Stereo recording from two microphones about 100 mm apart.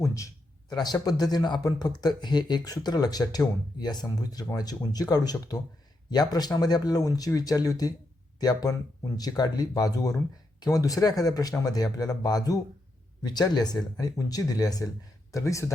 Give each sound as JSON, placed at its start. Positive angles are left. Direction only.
{"t": 0.0, "sound": "speech", "side_deg": 30}
{"t": 0.7, "sound": "speech", "side_deg": 45}